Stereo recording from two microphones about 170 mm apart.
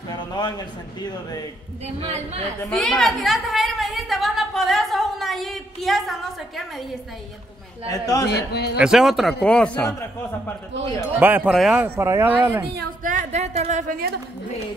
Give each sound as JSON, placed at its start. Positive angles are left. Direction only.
{"t": 0.1, "sound": "a man's voice", "side_deg": 25}
{"t": 2.0, "sound": "a woman's voice", "side_deg": -35}
{"t": 2.7, "sound": "a sound", "side_deg": 0}
{"t": 7.9, "sound": "speech", "side_deg": 20}
{"t": 8.3, "sound": "a man's voice", "side_deg": 75}
{"t": 8.7, "sound": "a man's voice", "side_deg": -5}
{"t": 9.8, "sound": "speech", "side_deg": 15}
{"t": 11.1, "sound": "a man's voice", "side_deg": -10}
{"t": 12.0, "sound": "speech", "side_deg": -15}
{"t": 13.0, "sound": "a woman's voice", "side_deg": -50}